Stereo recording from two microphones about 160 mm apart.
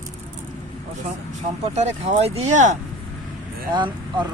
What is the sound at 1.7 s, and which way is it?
Speech, 45° right (ahead or behind).